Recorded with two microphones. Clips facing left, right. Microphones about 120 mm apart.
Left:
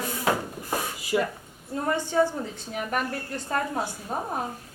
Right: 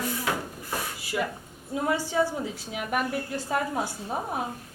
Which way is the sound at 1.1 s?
20° left (ahead or behind).